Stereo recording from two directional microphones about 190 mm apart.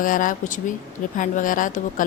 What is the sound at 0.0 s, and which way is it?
A woman's voice, 45° left (ahead or behind).